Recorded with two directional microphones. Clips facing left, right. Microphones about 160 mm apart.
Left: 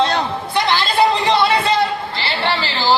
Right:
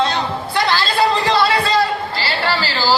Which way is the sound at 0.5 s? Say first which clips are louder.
Left 1 dB; 20° left (ahead or behind).